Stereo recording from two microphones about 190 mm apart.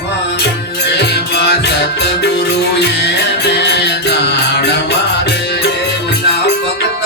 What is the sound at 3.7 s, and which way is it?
Music, 65° left (ahead or behind).